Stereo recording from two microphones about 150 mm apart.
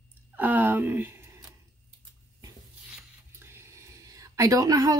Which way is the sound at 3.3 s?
15° right (ahead or behind).